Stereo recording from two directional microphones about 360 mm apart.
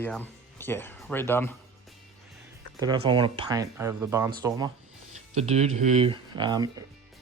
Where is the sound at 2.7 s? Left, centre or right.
Centre.